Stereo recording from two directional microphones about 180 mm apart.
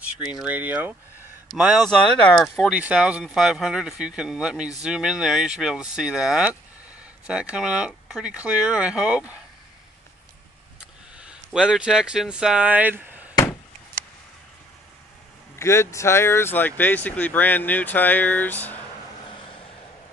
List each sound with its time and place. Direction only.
0.4 s speech: 10° right (ahead or behind)
10.8 s speech: 5° right (ahead or behind)
13.3 s a sound: 20° left (ahead or behind)
15.6 s speech: 15° left (ahead or behind)